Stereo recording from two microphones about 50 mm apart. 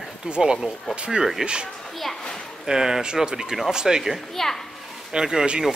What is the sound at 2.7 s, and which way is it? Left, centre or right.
Speech, centre.